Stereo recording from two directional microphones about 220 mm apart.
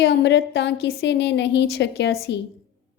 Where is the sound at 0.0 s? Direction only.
50° left (ahead or behind).